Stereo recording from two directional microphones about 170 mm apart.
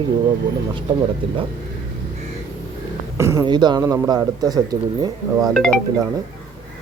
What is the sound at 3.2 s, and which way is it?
Speech, 15° right (ahead or behind).